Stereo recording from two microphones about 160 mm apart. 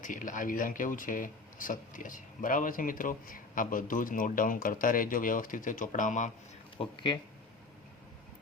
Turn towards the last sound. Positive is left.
turn(degrees=30)  # may be behind; listen again after turning